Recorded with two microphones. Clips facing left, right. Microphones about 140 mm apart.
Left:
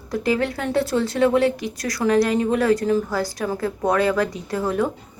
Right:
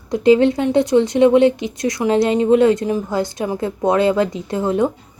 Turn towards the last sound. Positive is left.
turn(degrees=-25)  # may be behind; listen again after turning